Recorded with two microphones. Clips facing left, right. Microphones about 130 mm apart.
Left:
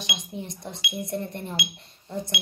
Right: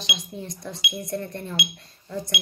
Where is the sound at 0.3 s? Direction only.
20° left (ahead or behind).